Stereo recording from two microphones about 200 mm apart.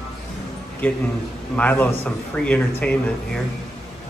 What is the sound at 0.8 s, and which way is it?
Speech, 10° left (ahead or behind).